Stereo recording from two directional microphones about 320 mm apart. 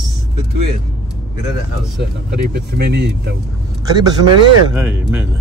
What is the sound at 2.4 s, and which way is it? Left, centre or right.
Speech, right.